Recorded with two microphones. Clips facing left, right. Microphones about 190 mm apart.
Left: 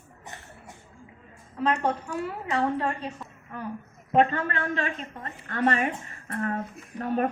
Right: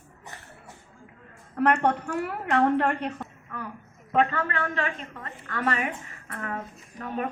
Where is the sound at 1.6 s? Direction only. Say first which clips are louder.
Right 3 dB; 65° right (ahead or behind).